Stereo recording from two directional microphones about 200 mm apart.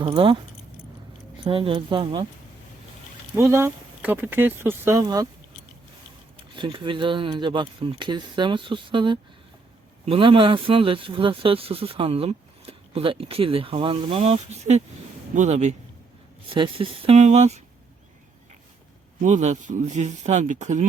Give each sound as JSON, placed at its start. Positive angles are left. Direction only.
{"t": 0.0, "sound": "speech", "side_deg": -25}
{"t": 1.5, "sound": "speech", "side_deg": -25}
{"t": 3.3, "sound": "speech", "side_deg": -10}
{"t": 6.5, "sound": "speech", "side_deg": -25}
{"t": 19.2, "sound": "speech", "side_deg": -35}